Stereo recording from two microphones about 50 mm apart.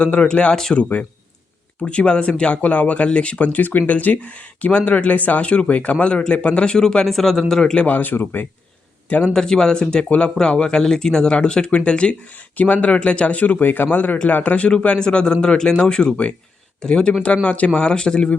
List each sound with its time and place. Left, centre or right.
0.0 s speech: left
7.9 s speech: left
9.3 s speech: centre